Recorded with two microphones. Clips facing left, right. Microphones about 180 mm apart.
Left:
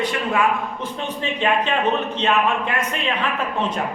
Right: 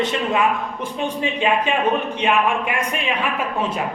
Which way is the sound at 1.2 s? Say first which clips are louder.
Even; 10° right (ahead or behind).